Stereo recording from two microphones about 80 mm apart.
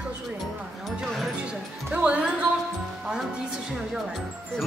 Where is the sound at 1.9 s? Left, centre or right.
Centre.